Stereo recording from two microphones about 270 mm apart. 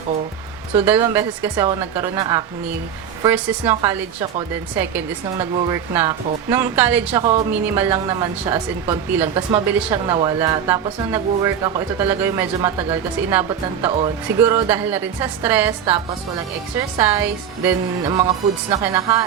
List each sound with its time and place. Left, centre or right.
0.8 s a woman's voice: centre
17.0 s a woman's voice: centre